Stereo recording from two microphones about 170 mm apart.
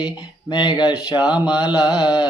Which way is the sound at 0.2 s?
25° left (ahead or behind).